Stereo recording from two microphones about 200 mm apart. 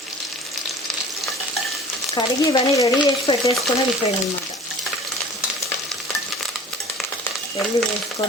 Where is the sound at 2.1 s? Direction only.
15° left (ahead or behind).